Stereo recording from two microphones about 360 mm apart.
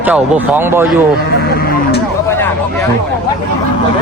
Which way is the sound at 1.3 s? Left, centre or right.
Left.